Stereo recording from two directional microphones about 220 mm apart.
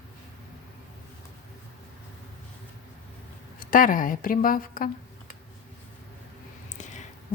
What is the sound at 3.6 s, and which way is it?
A woman's voice, 40° left (ahead or behind).